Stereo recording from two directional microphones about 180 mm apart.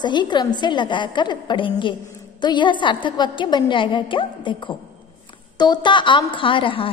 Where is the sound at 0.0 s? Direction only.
25° left (ahead or behind).